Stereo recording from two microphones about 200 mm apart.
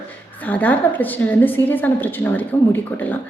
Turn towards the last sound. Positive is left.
turn(degrees=10)  # may be behind; listen again after turning